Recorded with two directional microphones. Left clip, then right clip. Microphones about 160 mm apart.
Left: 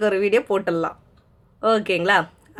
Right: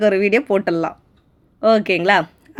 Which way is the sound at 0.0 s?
30° right (ahead or behind).